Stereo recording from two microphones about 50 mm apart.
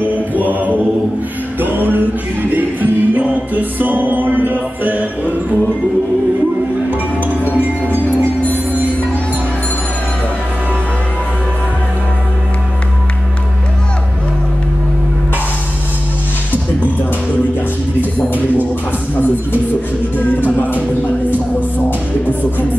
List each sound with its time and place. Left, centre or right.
0.0 s mantra: right
1.6 s music: right
7.5 s music: right
20.2 s music: left